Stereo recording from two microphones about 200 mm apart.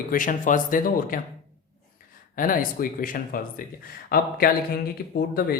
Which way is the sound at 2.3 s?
45° left (ahead or behind).